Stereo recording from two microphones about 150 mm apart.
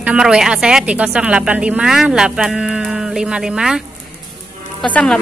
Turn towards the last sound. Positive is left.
turn(degrees=5)  # may be behind; listen again after turning